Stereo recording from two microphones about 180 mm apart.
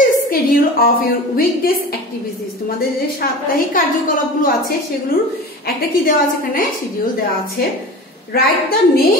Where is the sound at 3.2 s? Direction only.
50° left (ahead or behind).